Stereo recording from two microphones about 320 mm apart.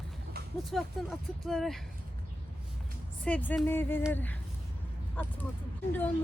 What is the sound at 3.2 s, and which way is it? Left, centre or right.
Speech, centre.